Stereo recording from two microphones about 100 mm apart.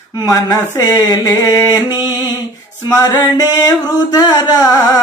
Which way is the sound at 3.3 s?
40° left (ahead or behind).